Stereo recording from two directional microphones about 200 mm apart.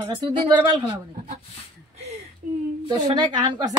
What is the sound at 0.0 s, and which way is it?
Speech, 20° right (ahead or behind).